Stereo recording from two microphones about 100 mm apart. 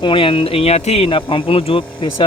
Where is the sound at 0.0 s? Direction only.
60° left (ahead or behind).